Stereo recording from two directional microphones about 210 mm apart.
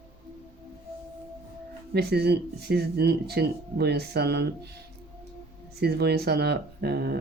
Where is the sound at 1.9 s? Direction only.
50° right (ahead or behind).